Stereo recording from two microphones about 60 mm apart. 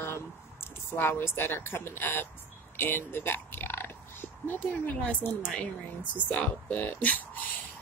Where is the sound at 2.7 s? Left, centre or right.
Left.